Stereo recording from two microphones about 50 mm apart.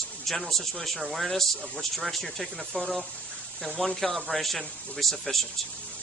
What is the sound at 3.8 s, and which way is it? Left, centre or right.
Speech, centre.